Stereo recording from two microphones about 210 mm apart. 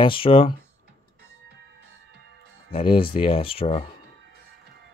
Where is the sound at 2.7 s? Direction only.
25° left (ahead or behind).